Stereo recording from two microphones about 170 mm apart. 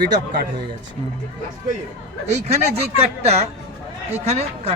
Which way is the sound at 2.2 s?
40° right (ahead or behind).